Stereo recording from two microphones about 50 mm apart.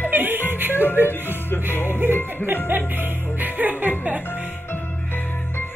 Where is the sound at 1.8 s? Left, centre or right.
Right.